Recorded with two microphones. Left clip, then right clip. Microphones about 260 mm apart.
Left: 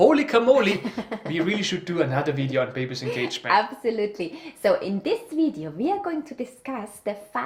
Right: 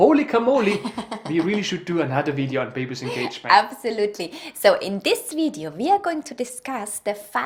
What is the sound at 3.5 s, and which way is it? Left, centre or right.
A woman's voice, right.